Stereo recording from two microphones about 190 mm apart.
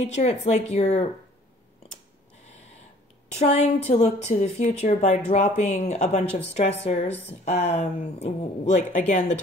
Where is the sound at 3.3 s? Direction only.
35° left (ahead or behind).